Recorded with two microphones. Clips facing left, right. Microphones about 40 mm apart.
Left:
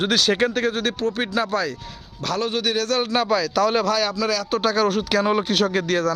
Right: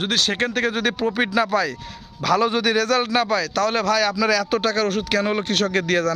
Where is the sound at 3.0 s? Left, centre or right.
Right.